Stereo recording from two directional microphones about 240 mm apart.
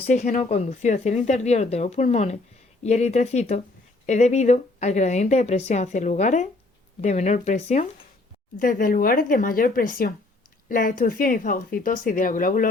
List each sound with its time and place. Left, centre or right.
0.1 s a woman's voice: left